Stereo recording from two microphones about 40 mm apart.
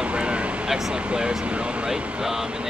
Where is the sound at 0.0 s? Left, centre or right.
Right.